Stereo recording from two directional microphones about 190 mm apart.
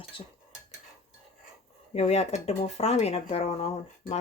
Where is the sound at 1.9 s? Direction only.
35° left (ahead or behind).